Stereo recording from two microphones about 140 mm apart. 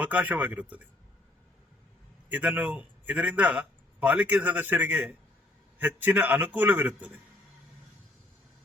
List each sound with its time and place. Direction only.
0.1 s a man's voice: 10° right (ahead or behind)
2.3 s a man's voice: 10° right (ahead or behind)